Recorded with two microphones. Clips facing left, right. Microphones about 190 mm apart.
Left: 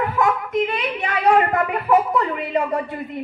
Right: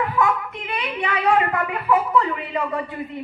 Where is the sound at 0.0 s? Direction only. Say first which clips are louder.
Left 1 dB; 40° left (ahead or behind).